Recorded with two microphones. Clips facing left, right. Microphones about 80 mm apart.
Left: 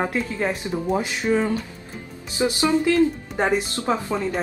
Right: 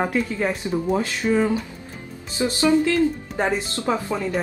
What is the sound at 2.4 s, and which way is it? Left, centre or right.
Speech, left.